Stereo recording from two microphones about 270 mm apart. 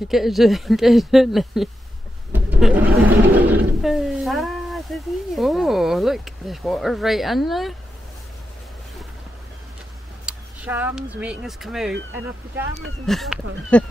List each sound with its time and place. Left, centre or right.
0.1 s speech: centre
2.3 s a sound: centre
3.1 s speech: centre
10.2 s speech: centre
13.0 s speech: centre